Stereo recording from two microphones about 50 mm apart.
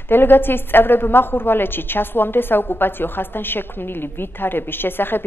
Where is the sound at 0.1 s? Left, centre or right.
Left.